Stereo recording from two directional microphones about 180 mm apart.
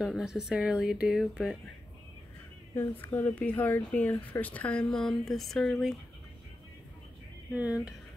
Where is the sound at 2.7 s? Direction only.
15° left (ahead or behind).